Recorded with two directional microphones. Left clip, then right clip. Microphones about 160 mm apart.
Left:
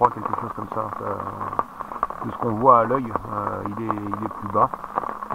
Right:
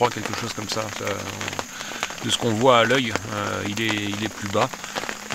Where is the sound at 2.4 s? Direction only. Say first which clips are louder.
Left 2 dB; 20° right (ahead or behind).